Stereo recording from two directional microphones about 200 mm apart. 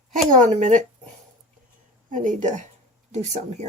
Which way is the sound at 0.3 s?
40° right (ahead or behind).